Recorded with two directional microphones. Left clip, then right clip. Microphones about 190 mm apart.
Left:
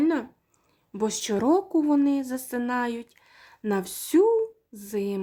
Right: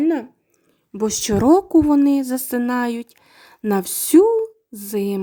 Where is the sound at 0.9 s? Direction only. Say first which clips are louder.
Right 6 dB; 30° right (ahead or behind).